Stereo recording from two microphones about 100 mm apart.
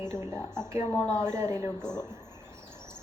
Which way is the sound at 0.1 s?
25° right (ahead or behind).